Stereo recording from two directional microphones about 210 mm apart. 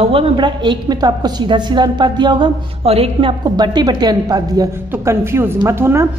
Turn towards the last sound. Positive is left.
turn(degrees=-10)  # may be behind; listen again after turning